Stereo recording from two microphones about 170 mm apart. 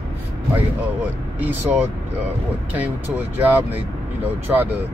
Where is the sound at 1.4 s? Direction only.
10° right (ahead or behind).